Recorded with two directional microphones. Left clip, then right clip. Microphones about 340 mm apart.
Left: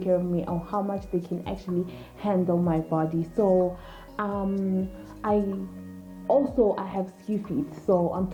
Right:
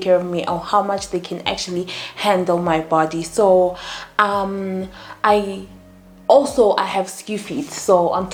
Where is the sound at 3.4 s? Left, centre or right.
Centre.